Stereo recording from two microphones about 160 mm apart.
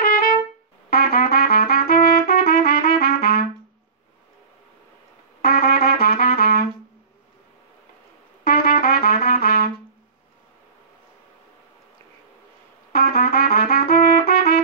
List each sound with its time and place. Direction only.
0.0 s trumpet: 65° left (ahead or behind)
5.4 s trumpet: 75° left (ahead or behind)
8.5 s trumpet: 70° left (ahead or behind)
12.9 s trumpet: 75° left (ahead or behind)